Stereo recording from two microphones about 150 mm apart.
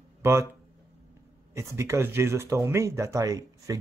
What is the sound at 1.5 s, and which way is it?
Speech, 20° right (ahead or behind).